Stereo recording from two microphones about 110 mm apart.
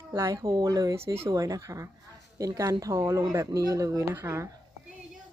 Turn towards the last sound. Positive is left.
turn(degrees=-20)  # may be behind; listen again after turning